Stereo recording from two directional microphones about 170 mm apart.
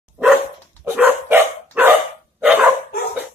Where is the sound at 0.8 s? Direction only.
10° right (ahead or behind).